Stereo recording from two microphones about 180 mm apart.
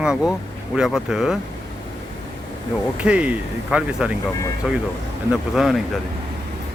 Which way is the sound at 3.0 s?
5° right (ahead or behind).